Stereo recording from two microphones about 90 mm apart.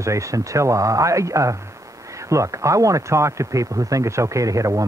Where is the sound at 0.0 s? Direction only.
35° right (ahead or behind).